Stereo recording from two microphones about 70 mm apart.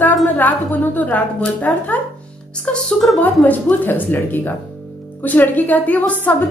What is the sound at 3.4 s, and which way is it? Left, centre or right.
A woman's voice, left.